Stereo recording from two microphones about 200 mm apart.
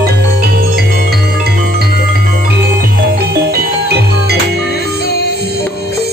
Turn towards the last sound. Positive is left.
turn(degrees=-50)  # may be behind; listen again after turning